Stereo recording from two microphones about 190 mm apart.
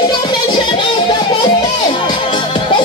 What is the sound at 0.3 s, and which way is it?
Music, 25° left (ahead or behind).